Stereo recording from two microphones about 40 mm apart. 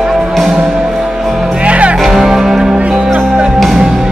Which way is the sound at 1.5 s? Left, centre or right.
Right.